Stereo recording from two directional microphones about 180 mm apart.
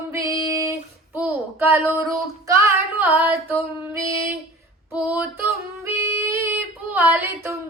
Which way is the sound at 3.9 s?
20° right (ahead or behind).